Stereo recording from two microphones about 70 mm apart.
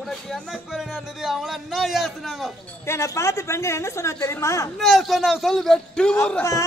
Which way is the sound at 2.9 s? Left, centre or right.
Left.